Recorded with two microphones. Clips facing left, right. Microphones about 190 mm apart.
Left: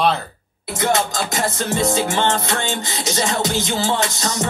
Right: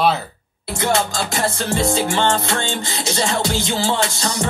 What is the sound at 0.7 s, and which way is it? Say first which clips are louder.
Music: even; 20° left (ahead or behind).